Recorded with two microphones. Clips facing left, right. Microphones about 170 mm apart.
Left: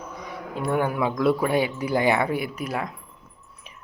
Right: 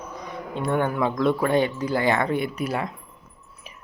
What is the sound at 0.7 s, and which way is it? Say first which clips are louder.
Speech: even; 10° left (ahead or behind).